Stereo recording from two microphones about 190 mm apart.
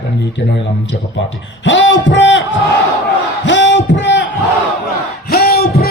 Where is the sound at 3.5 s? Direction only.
70° left (ahead or behind).